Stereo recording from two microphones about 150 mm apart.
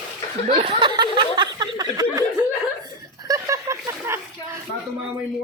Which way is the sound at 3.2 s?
20° right (ahead or behind).